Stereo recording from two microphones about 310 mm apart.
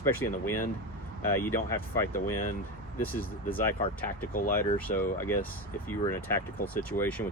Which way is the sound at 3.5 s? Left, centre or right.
Centre.